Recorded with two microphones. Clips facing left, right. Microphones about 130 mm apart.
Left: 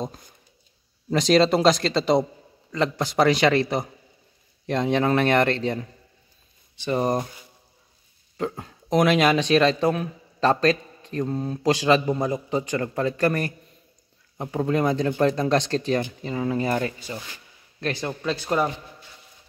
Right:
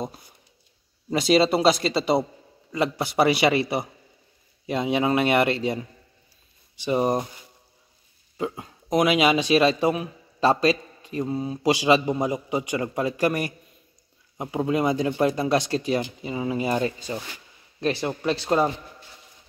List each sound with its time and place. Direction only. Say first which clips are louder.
1.1 s a man's voice: left 1 dB; 5° right (ahead or behind)
8.4 s a man's voice: left 1 dB; 5° right (ahead or behind)
17.1 s a man's voice: right 3 dB; 25° right (ahead or behind)
18.4 s a man's voice: right 2 dB; 25° right (ahead or behind)